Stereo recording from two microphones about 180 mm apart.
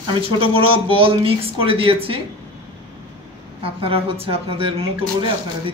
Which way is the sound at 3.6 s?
30° right (ahead or behind).